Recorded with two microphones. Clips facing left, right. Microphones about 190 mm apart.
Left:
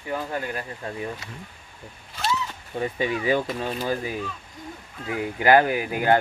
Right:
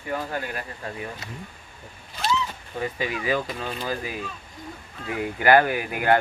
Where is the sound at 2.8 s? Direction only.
25° left (ahead or behind).